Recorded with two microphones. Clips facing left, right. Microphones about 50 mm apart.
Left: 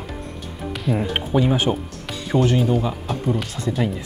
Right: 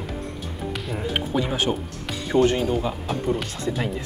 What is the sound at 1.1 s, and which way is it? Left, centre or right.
Speech, centre.